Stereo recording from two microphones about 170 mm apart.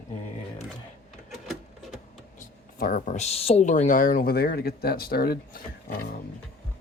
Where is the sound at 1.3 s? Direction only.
Centre (ahead or behind).